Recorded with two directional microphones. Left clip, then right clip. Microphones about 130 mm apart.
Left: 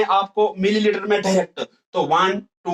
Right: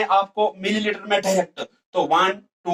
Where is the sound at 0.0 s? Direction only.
25° left (ahead or behind).